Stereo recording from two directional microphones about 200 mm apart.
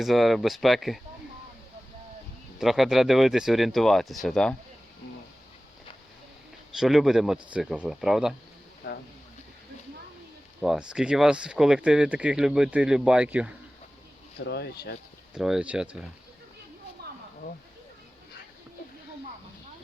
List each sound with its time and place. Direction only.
0.0 s speech: centre (ahead or behind)
2.6 s speech: centre (ahead or behind)
6.7 s speech: centre (ahead or behind)
8.8 s a sound: 60° left (ahead or behind)
10.6 s speech: 5° right (ahead or behind)
14.4 s speech: 55° left (ahead or behind)
15.4 s speech: 5° right (ahead or behind)
17.0 s a sound: 55° right (ahead or behind)